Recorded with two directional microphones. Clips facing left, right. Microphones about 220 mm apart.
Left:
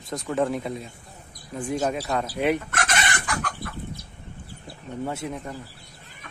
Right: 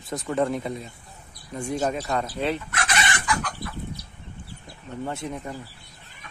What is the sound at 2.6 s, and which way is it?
Chicken, 45° left (ahead or behind).